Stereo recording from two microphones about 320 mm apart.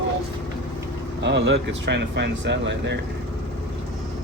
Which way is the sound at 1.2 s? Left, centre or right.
Right.